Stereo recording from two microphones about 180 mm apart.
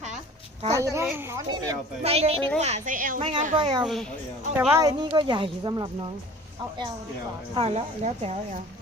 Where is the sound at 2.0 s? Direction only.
35° right (ahead or behind).